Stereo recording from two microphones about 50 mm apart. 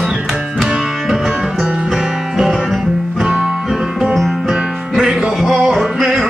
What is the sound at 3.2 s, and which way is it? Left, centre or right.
Music, centre.